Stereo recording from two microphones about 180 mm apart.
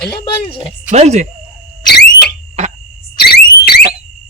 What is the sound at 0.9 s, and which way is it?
Speech, 40° right (ahead or behind).